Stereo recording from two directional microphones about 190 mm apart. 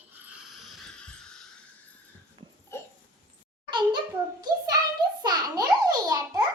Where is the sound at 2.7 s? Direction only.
15° left (ahead or behind).